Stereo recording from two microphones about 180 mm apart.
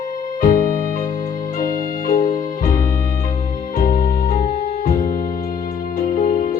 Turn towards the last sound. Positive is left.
turn(degrees=50)  # may be behind; listen again after turning